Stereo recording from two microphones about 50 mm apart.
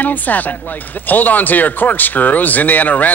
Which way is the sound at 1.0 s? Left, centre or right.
Left.